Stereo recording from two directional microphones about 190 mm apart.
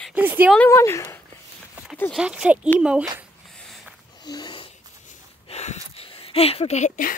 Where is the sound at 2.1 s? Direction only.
5° right (ahead or behind).